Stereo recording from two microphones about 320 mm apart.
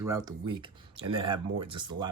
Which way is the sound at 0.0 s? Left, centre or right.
Centre.